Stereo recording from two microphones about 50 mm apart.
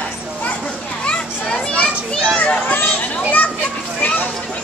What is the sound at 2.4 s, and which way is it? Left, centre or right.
Children playing, left.